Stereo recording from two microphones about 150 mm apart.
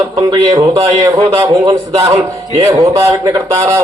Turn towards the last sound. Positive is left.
turn(degrees=-25)  # may be behind; listen again after turning